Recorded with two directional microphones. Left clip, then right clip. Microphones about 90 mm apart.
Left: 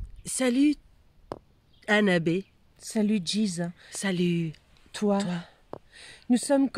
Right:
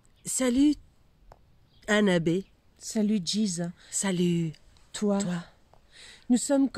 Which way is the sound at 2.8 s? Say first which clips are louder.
Left 1 dB; 40° left (ahead or behind).